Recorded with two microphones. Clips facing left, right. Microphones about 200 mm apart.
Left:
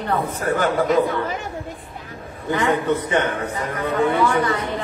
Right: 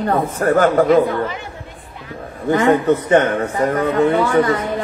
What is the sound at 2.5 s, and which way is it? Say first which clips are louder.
A man's voice: right 6 dB; 45° right (ahead or behind).